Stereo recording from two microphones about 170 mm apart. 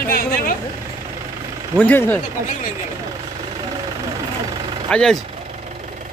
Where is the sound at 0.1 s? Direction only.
60° left (ahead or behind).